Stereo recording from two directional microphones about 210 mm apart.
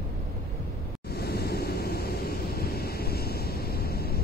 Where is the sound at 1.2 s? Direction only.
50° left (ahead or behind).